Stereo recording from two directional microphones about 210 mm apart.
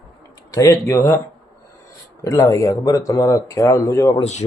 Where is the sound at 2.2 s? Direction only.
15° left (ahead or behind).